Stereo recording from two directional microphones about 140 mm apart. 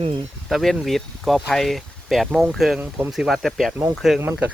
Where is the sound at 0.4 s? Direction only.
Centre (ahead or behind).